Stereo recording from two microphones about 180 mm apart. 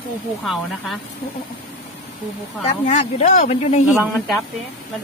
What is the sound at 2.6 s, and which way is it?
Speech, 40° left (ahead or behind).